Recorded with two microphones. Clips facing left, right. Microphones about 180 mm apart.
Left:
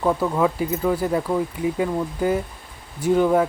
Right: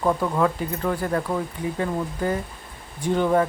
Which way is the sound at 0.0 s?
5° left (ahead or behind).